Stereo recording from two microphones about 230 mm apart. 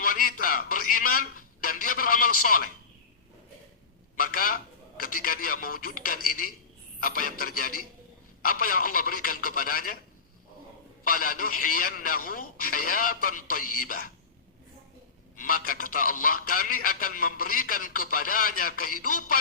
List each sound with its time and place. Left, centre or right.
0.0 s a sound: left
1.6 s a man's voice: left
4.2 s a man's voice: left
11.0 s a man's voice: left
15.4 s a man's voice: left